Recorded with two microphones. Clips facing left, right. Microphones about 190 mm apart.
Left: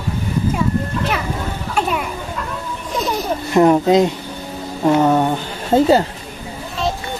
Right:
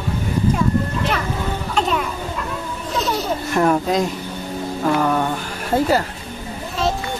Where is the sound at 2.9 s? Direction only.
10° left (ahead or behind).